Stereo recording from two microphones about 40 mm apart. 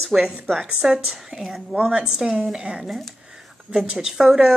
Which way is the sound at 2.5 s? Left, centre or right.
Right.